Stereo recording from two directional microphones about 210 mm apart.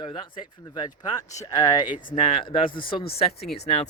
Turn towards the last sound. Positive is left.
turn(degrees=30)  # may be behind; listen again after turning